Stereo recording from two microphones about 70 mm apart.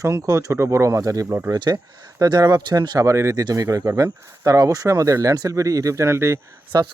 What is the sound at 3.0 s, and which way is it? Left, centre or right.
Speech, right.